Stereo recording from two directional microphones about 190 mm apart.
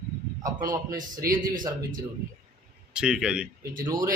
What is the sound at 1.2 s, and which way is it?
Speech, 55° right (ahead or behind).